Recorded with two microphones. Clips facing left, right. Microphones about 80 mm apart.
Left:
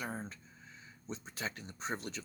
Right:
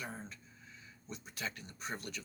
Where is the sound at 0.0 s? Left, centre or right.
Left.